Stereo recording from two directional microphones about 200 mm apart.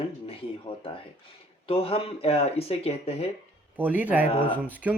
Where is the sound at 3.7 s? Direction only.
10° right (ahead or behind).